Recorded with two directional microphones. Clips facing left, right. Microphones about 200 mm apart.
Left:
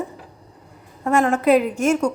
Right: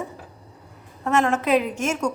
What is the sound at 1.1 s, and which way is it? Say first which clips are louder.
Speech: left 4 dB; 10° left (ahead or behind).